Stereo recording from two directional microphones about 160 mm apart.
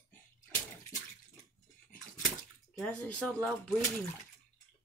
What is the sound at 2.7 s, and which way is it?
Speech, 5° left (ahead or behind).